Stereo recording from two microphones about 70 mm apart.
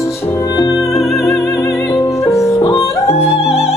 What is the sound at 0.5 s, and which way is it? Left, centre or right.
Music, left.